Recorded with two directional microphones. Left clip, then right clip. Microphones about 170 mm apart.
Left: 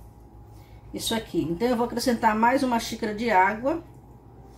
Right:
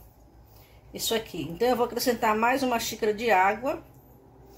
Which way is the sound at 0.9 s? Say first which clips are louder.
Left 2 dB; 45° right (ahead or behind).